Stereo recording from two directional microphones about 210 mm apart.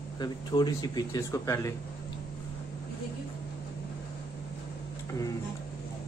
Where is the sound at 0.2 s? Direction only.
20° left (ahead or behind).